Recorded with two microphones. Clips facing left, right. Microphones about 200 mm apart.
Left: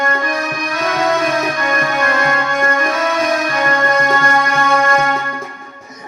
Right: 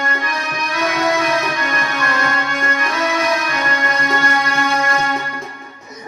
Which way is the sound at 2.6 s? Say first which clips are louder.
Left 3 dB; 45° left (ahead or behind).